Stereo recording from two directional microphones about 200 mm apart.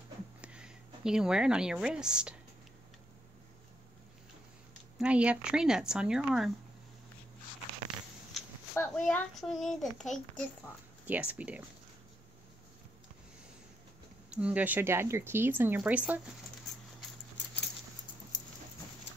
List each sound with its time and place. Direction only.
0.4 s speech: 5° right (ahead or behind)
4.9 s a child's voice: 5° right (ahead or behind)
8.7 s a child's voice: 5° left (ahead or behind)
11.1 s speech: 5° right (ahead or behind)
14.3 s speech: 5° right (ahead or behind)